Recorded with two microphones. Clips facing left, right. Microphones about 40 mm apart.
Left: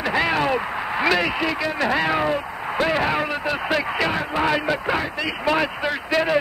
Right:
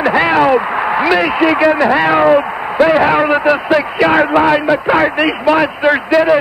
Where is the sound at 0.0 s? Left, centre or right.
Right.